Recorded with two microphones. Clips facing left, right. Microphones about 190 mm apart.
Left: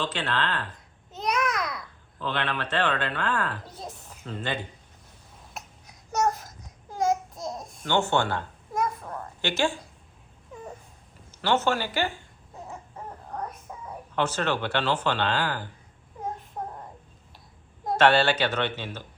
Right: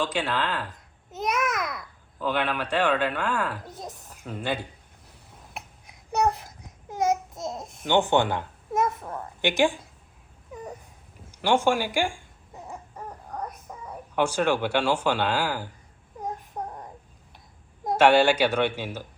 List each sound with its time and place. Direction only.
0.0 s a child's voice: 10° right (ahead or behind)
6.9 s babbling: 20° right (ahead or behind)
10.5 s a sound: centre (ahead or behind)
11.3 s speech: 10° right (ahead or behind)
14.2 s speech: 10° right (ahead or behind)
16.6 s a sound: 15° right (ahead or behind)
17.9 s speech: 10° right (ahead or behind)